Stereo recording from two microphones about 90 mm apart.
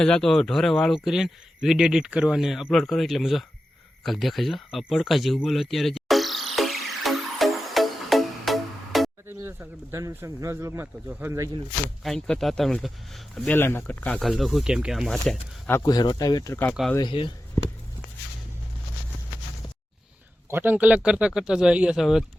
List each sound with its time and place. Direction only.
0.0 s speech: 5° left (ahead or behind)
4.0 s a sound: centre (ahead or behind)
9.2 s speech: 25° right (ahead or behind)
12.0 s speech: 5° left (ahead or behind)
13.4 s speech: 25° left (ahead or behind)
14.2 s speech: centre (ahead or behind)
15.8 s speech: 45° left (ahead or behind)
17.0 s speech: 65° left (ahead or behind)
20.5 s speech: 20° right (ahead or behind); by 22.2 s 5° right (ahead or behind)